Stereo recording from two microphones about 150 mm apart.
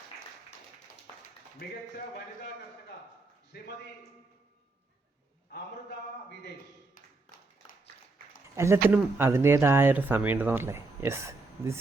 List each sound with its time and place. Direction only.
3.5 s a man's voice: 90° left
8.5 s speech: 20° right (ahead or behind)